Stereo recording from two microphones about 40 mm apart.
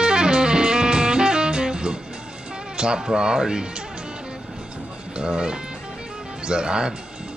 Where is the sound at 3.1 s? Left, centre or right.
Centre.